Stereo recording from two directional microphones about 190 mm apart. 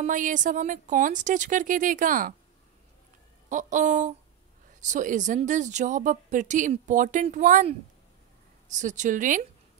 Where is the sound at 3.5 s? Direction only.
40° right (ahead or behind).